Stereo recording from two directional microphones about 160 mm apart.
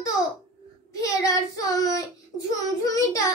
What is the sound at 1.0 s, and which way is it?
Speech, 20° left (ahead or behind).